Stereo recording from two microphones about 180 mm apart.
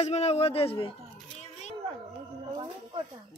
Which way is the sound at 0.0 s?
35° left (ahead or behind).